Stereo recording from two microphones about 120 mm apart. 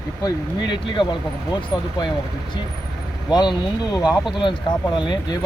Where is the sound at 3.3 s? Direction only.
35° left (ahead or behind).